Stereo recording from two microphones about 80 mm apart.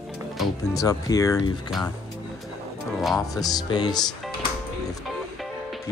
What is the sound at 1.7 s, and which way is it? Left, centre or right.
Speech, centre.